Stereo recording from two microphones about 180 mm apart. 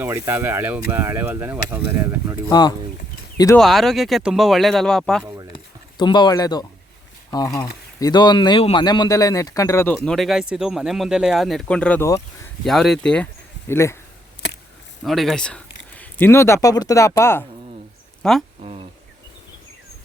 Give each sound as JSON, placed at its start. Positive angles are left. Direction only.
{"t": 0.0, "sound": "speech", "side_deg": -10}
{"t": 2.5, "sound": "speech", "side_deg": 20}
{"t": 3.6, "sound": "speech", "side_deg": 0}
{"t": 6.0, "sound": "a man's voice", "side_deg": 25}
{"t": 12.6, "sound": "a man's voice", "side_deg": 0}
{"t": 15.0, "sound": "speech", "side_deg": 0}
{"t": 18.2, "sound": "speech", "side_deg": 0}
{"t": 18.6, "sound": "insect", "side_deg": -35}